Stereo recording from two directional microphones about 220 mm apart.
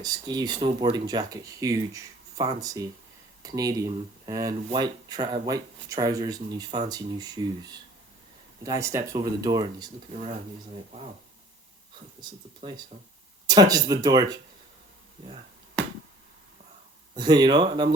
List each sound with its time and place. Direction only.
0.0 s speech: 15° right (ahead or behind)
12.2 s speech: 20° right (ahead or behind)
17.2 s speech: 20° right (ahead or behind)